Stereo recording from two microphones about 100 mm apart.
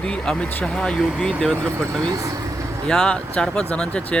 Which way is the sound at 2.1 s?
35° right (ahead or behind).